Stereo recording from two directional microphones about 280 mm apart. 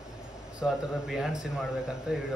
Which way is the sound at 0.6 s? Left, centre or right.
Centre.